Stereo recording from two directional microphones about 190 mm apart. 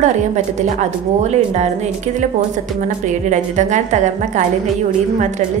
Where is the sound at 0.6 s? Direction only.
35° right (ahead or behind).